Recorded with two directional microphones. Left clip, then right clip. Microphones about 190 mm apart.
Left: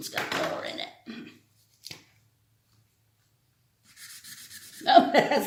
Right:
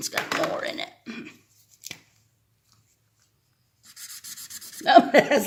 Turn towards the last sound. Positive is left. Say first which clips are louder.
# right 3 dB
turn(degrees=-45)  # may be behind; listen again after turning